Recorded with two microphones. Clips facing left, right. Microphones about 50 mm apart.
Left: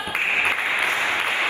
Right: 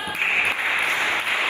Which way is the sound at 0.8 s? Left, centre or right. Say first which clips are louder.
Even; left.